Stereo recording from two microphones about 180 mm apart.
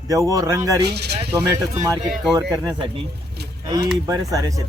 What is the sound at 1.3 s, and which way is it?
Speech, 15° right (ahead or behind).